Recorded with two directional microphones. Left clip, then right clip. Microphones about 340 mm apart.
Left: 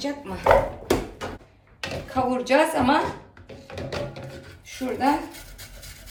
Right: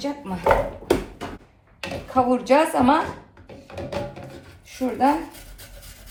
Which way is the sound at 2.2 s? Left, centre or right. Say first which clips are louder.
Even; centre.